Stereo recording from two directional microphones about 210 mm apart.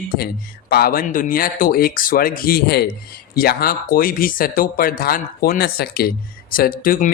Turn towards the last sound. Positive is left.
turn(degrees=40)  # may be behind; listen again after turning